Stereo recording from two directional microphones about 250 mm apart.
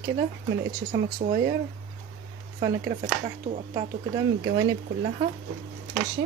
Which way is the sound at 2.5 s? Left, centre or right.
Right.